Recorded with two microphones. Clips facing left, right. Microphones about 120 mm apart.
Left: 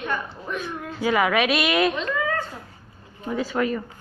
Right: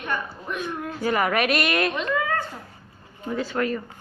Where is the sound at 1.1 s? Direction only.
Centre (ahead or behind).